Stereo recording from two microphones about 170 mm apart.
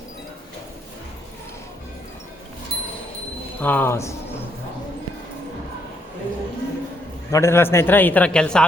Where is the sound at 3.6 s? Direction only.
10° left (ahead or behind).